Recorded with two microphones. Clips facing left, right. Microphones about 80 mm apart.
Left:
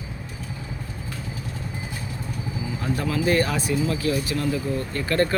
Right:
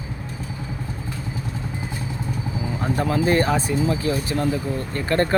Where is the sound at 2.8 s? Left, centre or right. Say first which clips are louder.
Right 3 dB; right.